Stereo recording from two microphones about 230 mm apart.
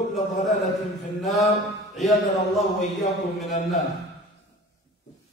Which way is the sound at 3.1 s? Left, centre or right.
Centre.